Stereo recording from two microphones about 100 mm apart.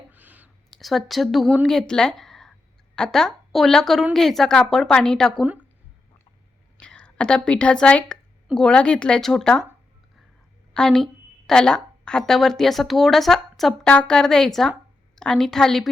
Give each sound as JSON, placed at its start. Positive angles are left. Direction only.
{"t": 0.1, "sound": "a sound", "side_deg": -15}
{"t": 0.7, "sound": "a woman's voice", "side_deg": 0}
{"t": 5.4, "sound": "speech", "side_deg": -15}
{"t": 6.7, "sound": "speech", "side_deg": 10}
{"t": 10.8, "sound": "a woman's voice", "side_deg": 5}